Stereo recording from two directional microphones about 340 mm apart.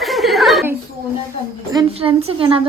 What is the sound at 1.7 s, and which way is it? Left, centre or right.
Speech, centre.